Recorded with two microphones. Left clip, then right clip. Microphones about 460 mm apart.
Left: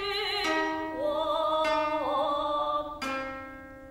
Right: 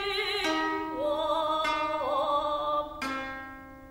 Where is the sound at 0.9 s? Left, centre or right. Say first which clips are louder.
Even; right.